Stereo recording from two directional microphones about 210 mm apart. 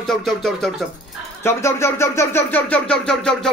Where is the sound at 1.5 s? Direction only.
10° left (ahead or behind).